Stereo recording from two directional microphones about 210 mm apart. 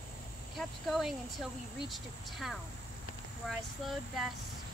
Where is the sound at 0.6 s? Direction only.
Centre (ahead or behind).